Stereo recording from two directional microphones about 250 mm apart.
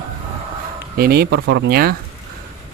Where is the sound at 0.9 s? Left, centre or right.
Right.